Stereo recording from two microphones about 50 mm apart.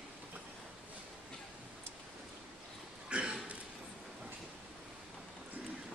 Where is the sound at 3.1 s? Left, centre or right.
Centre.